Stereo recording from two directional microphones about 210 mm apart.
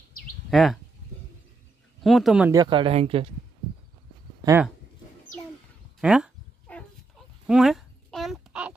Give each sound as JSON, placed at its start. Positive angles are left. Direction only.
{"t": 0.5, "sound": "speech", "side_deg": 0}
{"t": 2.0, "sound": "speech", "side_deg": 0}
{"t": 2.5, "sound": "speech", "side_deg": -20}
{"t": 6.0, "sound": "cat", "side_deg": -5}
{"t": 7.4, "sound": "a sound", "side_deg": 0}